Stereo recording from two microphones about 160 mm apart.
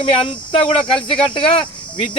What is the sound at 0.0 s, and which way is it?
Speech, 35° left (ahead or behind).